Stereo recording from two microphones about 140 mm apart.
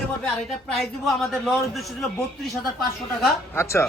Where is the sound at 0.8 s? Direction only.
Centre (ahead or behind).